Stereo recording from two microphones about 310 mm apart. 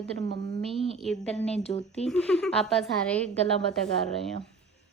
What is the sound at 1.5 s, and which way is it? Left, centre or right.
Speech, centre.